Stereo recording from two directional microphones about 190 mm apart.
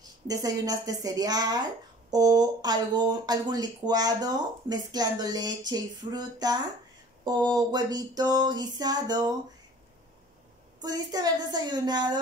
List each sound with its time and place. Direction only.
0.3 s a woman's voice: 20° right (ahead or behind)
10.8 s a woman's voice: 20° right (ahead or behind)